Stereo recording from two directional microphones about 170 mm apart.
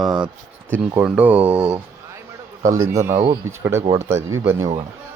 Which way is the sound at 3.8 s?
30° right (ahead or behind).